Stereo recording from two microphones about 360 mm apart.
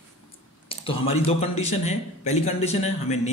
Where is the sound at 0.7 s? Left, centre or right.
Centre.